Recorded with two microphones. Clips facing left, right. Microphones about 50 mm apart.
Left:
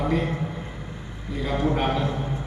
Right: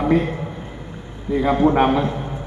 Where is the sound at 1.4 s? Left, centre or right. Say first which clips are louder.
Right 8 dB; right.